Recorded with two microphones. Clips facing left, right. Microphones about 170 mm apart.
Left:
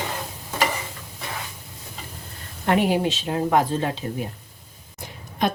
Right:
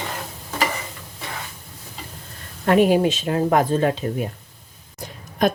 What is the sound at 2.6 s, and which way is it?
A woman's voice, 45° right (ahead or behind).